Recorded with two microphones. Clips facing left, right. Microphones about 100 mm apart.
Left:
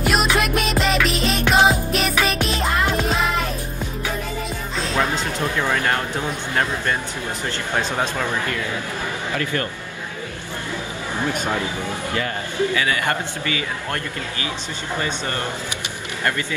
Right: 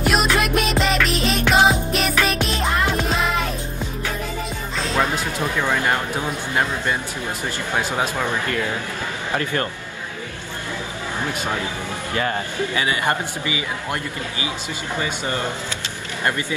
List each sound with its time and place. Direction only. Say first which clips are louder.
0.0 s music: even; centre (ahead or behind)
4.7 s music: right 1 dB; 5° right (ahead or behind)
6.5 s speech: even; 15° right (ahead or behind)
9.4 s a man's voice: even; 30° right (ahead or behind)
12.7 s a man's voice: even; 25° right (ahead or behind)
15.0 s speech: right 1 dB; 15° right (ahead or behind)